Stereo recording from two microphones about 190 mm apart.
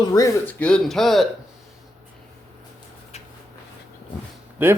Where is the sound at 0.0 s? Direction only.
20° left (ahead or behind).